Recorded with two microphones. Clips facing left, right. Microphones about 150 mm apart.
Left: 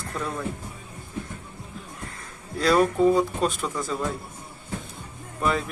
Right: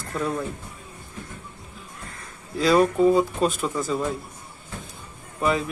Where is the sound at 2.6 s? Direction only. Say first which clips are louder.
Right 2 dB; centre (ahead or behind).